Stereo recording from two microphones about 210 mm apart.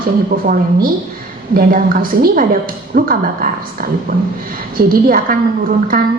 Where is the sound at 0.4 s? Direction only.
45° right (ahead or behind).